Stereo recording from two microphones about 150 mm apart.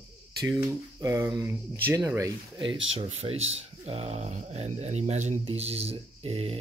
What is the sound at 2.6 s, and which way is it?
Speech, 35° right (ahead or behind).